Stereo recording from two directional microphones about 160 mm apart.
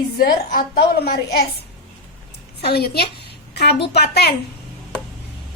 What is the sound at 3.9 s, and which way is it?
Speech, 90° left.